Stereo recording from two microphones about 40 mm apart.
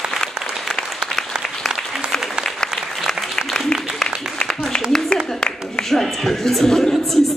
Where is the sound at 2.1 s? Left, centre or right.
Centre.